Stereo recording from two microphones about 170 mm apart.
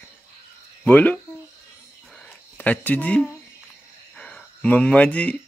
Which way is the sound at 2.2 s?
10° left (ahead or behind).